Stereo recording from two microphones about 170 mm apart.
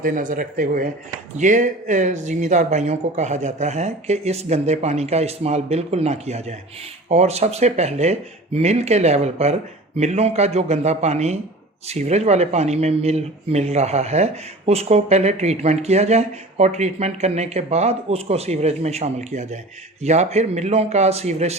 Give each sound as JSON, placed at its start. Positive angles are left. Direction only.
{"t": 0.0, "sound": "speech", "side_deg": -50}